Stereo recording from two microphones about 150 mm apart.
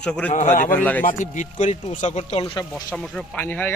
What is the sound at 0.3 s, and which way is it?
Speech, 50° left (ahead or behind).